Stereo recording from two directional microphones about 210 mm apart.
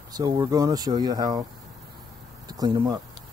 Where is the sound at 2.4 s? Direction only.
20° right (ahead or behind).